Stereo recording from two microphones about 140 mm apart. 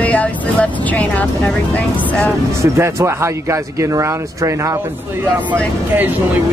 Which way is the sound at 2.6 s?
20° right (ahead or behind).